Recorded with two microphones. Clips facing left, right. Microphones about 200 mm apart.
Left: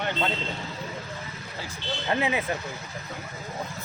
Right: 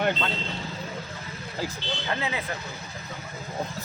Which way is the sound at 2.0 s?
20° left (ahead or behind).